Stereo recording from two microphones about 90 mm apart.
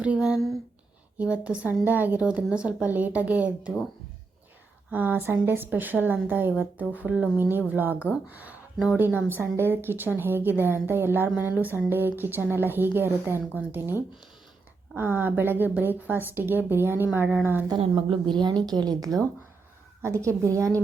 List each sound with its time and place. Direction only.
0.0 s a woman's voice: 10° right (ahead or behind)
1.2 s a woman's voice: 15° right (ahead or behind)
4.9 s a woman's voice: 20° right (ahead or behind)
17.7 s a woman's voice: 85° right; by 19.1 s 45° right (ahead or behind)
20.0 s a woman's voice: 30° right (ahead or behind)